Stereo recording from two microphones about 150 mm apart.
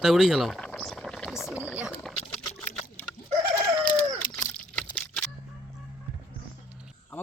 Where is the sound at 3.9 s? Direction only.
20° left (ahead or behind).